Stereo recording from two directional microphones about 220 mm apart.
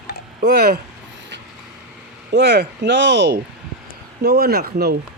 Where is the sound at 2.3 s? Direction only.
50° right (ahead or behind).